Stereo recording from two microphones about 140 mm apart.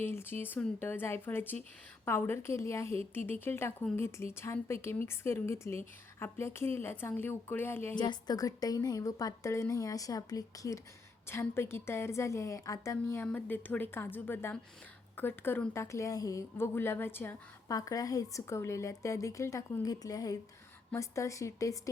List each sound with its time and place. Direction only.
0.0 s a woman's voice: 15° left (ahead or behind)
7.9 s a woman's voice: 30° left (ahead or behind)